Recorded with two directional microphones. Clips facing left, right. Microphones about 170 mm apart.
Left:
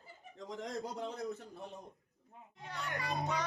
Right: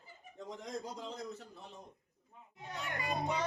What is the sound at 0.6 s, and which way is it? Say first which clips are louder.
Speech: left 3 dB; 70° left (ahead or behind).